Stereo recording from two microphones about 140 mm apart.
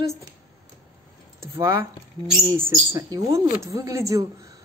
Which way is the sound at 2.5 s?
20° right (ahead or behind).